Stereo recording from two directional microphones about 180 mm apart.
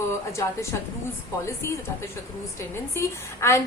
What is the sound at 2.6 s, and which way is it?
A woman's voice, 15° left (ahead or behind).